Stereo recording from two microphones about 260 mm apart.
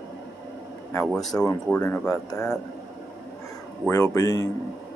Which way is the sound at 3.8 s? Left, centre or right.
Centre.